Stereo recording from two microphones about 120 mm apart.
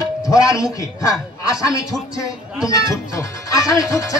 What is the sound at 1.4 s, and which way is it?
Speech, 30° left (ahead or behind).